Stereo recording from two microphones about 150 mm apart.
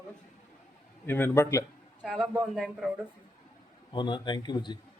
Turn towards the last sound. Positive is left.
turn(degrees=30)  # may be behind; listen again after turning